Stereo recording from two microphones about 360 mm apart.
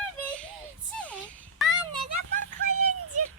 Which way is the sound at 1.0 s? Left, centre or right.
Centre.